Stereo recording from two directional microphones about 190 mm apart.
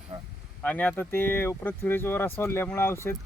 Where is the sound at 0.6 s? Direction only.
10° left (ahead or behind).